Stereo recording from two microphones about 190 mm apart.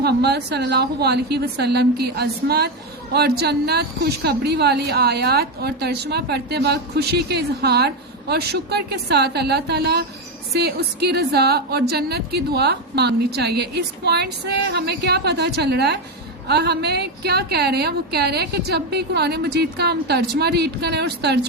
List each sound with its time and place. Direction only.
0.0 s a woman's voice: 60° right (ahead or behind)